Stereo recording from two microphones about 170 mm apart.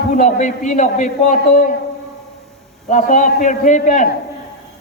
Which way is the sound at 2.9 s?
50° left (ahead or behind).